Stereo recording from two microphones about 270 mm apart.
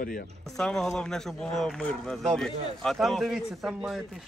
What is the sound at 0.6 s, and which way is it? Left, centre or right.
A man's voice, centre.